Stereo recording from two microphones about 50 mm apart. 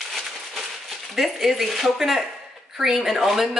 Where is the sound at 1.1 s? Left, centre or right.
Centre.